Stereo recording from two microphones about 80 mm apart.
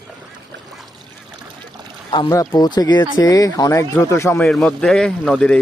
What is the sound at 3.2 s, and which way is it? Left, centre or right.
Speech, left.